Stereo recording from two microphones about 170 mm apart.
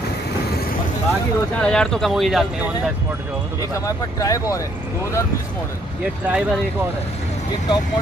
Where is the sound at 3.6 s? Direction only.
20° left (ahead or behind).